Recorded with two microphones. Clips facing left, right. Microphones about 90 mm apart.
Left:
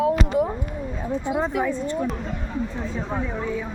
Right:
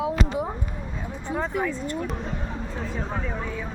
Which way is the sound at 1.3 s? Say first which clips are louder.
Left 2 dB; 10° left (ahead or behind).